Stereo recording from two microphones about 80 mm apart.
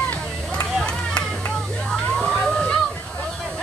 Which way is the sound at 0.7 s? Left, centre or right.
Centre.